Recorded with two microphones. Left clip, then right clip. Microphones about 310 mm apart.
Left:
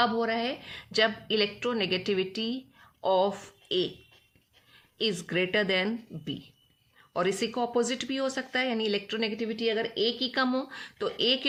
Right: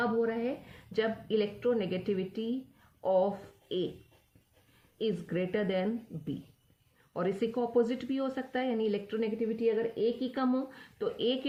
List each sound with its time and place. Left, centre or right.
0.0 s speech: left
4.9 s speech: left